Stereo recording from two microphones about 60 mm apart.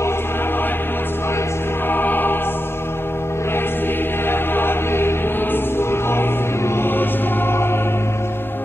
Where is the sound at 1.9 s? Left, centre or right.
Left.